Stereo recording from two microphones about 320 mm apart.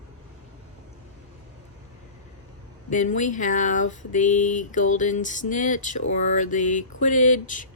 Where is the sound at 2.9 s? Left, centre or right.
Left.